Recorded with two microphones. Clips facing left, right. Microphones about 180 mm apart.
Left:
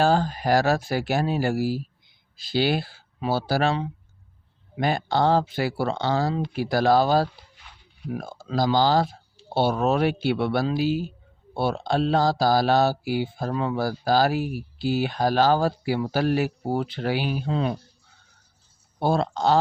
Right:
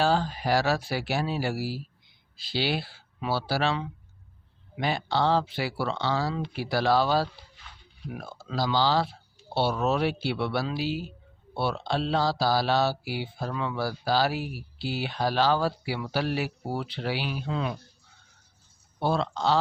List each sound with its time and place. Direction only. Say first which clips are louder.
0.0 s speech: left 4 dB; 45° left (ahead or behind)
18.9 s speech: left 4 dB; 45° left (ahead or behind)